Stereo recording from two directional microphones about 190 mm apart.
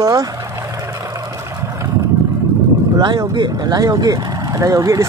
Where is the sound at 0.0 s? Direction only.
20° right (ahead or behind).